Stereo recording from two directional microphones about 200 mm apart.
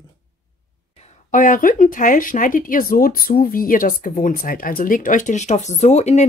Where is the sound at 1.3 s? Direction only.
40° left (ahead or behind).